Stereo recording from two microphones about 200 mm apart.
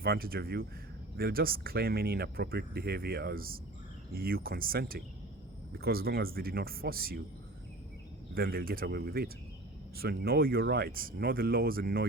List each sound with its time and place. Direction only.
0.0 s speech: 50° right (ahead or behind)
8.4 s speech: 50° right (ahead or behind)